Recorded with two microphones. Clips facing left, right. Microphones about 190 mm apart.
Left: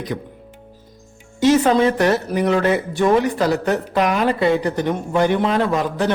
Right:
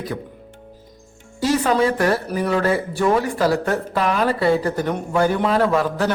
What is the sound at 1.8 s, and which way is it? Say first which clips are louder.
Speech: left 2 dB; 25° left (ahead or behind).